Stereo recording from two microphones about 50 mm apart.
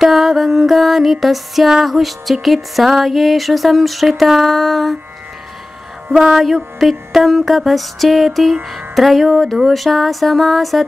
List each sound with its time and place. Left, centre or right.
0.0 s music: centre
6.1 s music: centre